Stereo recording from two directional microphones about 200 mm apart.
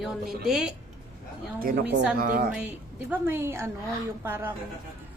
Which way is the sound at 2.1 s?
50° right (ahead or behind).